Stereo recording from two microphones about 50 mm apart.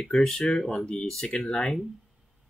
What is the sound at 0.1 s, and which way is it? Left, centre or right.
Speech, centre.